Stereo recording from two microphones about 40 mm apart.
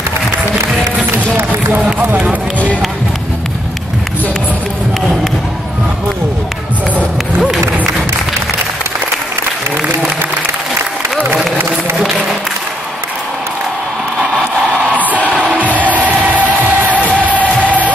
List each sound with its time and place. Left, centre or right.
15.3 s music: right
15.6 s music: right